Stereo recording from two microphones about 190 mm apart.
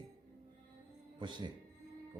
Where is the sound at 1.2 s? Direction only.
25° right (ahead or behind).